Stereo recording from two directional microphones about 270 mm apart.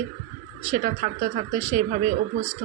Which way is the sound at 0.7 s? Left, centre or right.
Right.